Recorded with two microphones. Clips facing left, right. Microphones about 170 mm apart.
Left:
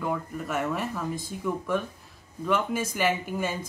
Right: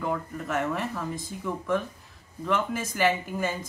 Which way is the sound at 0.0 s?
5° left (ahead or behind).